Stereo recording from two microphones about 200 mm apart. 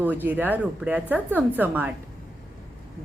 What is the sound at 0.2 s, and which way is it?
Speech, 10° right (ahead or behind).